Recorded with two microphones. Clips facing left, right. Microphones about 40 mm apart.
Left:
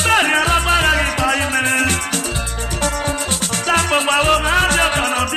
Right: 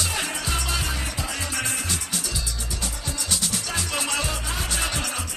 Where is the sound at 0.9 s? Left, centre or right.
Left.